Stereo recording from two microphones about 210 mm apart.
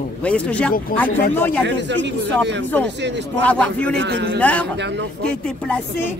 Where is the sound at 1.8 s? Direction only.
55° right (ahead or behind).